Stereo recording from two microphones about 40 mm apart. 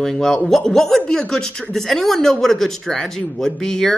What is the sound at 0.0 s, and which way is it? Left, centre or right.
Speech, centre.